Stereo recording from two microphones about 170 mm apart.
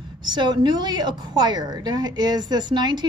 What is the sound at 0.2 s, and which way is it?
A woman's voice, 25° right (ahead or behind).